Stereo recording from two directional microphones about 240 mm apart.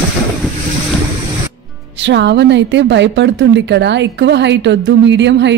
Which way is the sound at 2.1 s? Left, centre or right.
Right.